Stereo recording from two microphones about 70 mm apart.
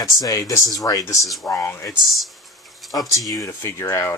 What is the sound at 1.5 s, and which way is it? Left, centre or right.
Speech, left.